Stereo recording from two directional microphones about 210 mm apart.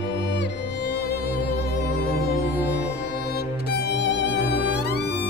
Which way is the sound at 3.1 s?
50° left (ahead or behind).